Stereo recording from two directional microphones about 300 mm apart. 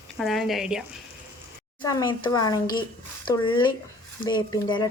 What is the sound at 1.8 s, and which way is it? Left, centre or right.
Speech, centre.